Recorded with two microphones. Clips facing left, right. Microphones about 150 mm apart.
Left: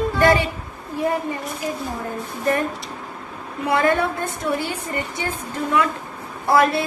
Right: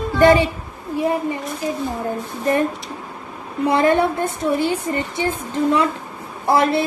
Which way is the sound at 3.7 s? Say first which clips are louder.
Right 3 dB; 30° right (ahead or behind).